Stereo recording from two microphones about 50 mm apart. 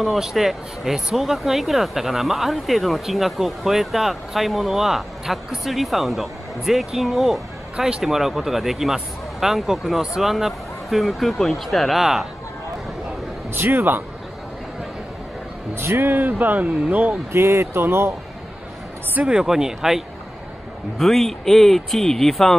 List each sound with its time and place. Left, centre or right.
0.0 s speech: centre
13.5 s speech: right
15.7 s speech: right
17.3 s speech: right
19.2 s speech: centre
21.0 s speech: centre